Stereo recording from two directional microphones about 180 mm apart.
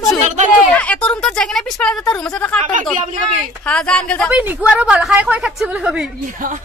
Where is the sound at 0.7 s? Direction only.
5° left (ahead or behind).